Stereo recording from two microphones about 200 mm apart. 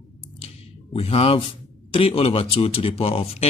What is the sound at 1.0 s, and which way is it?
Speech, 30° left (ahead or behind).